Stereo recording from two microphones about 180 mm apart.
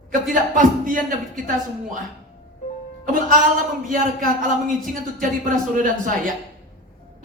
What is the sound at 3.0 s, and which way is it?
Speech, 50° right (ahead or behind).